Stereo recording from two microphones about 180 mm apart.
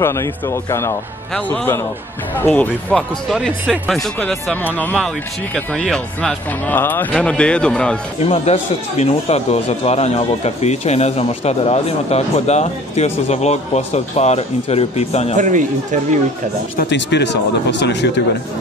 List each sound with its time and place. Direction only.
0.0 s a man's voice: 15° left (ahead or behind)
8.2 s speech: 35° left (ahead or behind)
15.3 s speech: 45° right (ahead or behind)
16.7 s speech: 70° left (ahead or behind)